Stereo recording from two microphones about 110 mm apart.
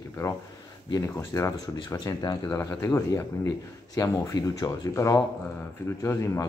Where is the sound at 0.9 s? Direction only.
30° left (ahead or behind).